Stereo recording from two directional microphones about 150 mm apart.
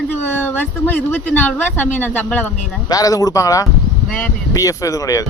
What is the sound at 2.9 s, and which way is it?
Speech, 25° left (ahead or behind).